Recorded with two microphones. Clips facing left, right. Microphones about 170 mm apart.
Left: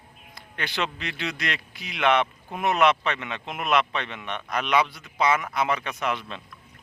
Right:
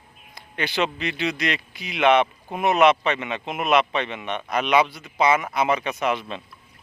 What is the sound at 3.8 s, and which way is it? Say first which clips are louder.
Speech: right 4 dB; 20° right (ahead or behind).